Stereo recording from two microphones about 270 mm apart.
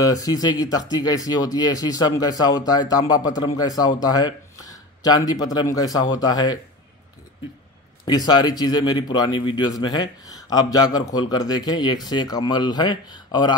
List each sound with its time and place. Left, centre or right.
0.0 s speech: centre
8.0 s speech: centre